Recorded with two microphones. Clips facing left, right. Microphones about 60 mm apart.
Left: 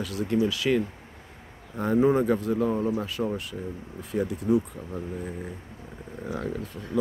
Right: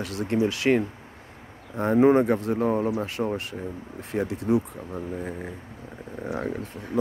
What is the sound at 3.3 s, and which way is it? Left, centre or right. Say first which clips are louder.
Speech: right 2 dB; right.